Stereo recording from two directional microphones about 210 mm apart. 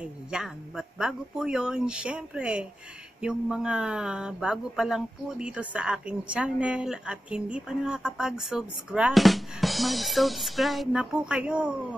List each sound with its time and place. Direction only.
0.0 s speech: 5° right (ahead or behind)